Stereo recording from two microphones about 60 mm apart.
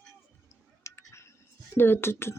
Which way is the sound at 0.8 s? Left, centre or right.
Left.